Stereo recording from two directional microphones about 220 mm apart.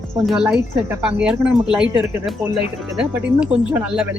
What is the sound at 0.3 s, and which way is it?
Speech, 5° right (ahead or behind).